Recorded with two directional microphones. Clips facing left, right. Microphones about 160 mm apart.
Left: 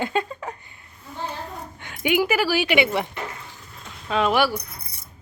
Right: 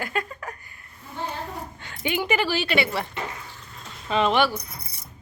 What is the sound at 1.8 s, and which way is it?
Speech, 15° left (ahead or behind).